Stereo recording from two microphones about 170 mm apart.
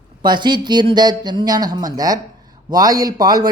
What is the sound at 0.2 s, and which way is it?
Speech, 25° right (ahead or behind).